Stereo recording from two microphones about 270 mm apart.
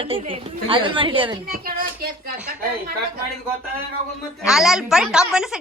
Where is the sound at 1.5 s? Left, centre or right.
Right.